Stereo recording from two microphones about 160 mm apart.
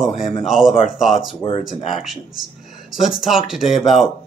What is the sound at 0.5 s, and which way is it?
Speech, centre (ahead or behind).